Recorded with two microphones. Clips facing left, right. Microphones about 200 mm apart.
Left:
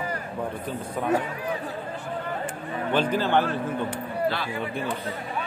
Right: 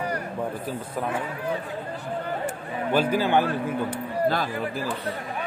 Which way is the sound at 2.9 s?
10° right (ahead or behind).